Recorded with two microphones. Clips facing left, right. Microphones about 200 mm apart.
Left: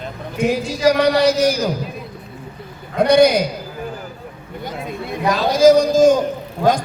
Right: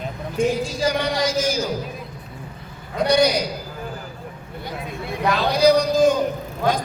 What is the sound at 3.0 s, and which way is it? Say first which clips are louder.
Speech: left 6 dB; 55° left (ahead or behind).